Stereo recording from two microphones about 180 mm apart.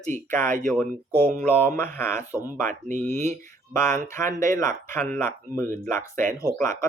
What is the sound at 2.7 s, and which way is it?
Speech, 45° right (ahead or behind).